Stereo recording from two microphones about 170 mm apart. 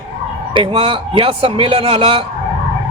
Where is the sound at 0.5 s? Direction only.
30° right (ahead or behind).